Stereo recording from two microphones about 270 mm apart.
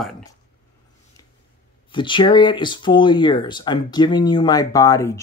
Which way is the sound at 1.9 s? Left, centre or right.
Centre.